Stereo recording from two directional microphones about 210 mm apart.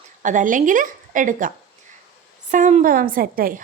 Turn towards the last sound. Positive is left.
turn(degrees=-45)  # may be behind; listen again after turning